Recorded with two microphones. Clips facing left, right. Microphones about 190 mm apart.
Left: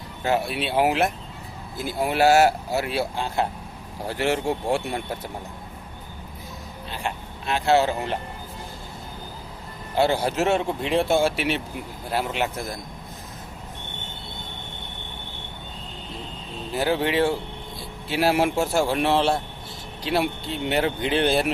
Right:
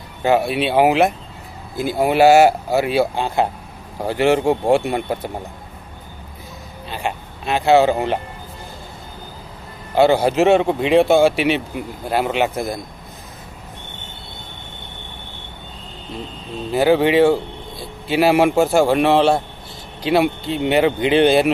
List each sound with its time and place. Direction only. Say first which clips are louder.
0.2 s speech: right 7 dB; 75° right (ahead or behind)
7.5 s speech: right 6 dB; 65° right (ahead or behind)
9.9 s speech: right 7 dB; 70° right (ahead or behind)
16.7 s speech: right 8 dB; 75° right (ahead or behind)